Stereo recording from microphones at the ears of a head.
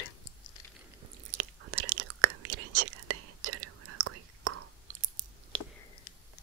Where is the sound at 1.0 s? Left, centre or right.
Right.